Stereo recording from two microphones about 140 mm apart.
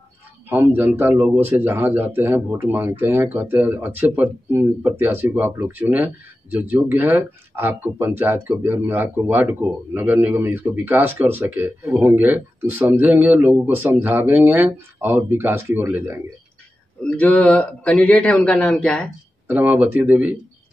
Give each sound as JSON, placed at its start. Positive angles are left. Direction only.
{"t": 0.5, "sound": "speech", "side_deg": -15}
{"t": 17.0, "sound": "a man's voice", "side_deg": 10}
{"t": 19.4, "sound": "speech", "side_deg": -15}